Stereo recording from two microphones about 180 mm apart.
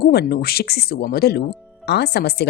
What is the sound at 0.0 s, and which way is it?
A woman's voice, 60° left (ahead or behind).